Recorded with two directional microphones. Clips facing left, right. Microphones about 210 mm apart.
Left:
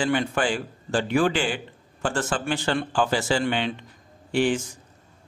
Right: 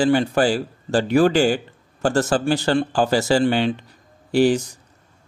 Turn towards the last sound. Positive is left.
turn(degrees=-40)  # may be behind; listen again after turning